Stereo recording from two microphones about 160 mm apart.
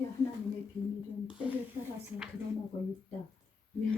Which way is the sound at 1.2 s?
10° right (ahead or behind).